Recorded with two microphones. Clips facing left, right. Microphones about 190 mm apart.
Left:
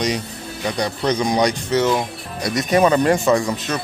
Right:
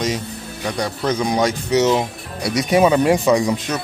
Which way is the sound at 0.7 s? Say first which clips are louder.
Left 1 dB; centre (ahead or behind).